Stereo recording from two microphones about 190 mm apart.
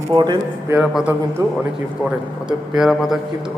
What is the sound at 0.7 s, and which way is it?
Speech, 5° right (ahead or behind).